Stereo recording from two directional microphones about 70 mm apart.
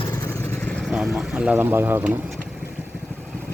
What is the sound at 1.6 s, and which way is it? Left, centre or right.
Speech, right.